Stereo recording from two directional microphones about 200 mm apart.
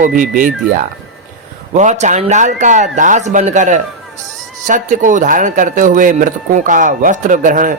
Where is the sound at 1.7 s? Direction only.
35° right (ahead or behind).